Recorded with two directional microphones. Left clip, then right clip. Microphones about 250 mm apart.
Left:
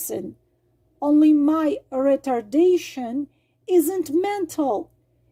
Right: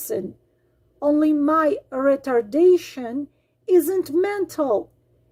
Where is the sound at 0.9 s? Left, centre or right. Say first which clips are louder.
Left 2 dB; left.